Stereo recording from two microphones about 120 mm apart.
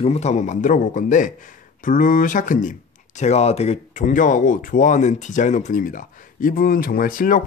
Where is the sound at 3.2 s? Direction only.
65° left (ahead or behind); by 6.0 s 90° left.